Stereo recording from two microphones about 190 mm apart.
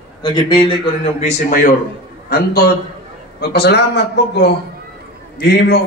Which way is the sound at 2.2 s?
55° left (ahead or behind).